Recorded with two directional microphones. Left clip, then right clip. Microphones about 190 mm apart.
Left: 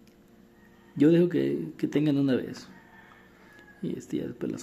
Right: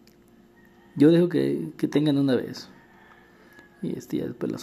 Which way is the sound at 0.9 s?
15° right (ahead or behind).